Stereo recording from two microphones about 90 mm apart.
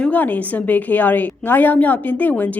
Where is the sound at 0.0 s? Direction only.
20° left (ahead or behind).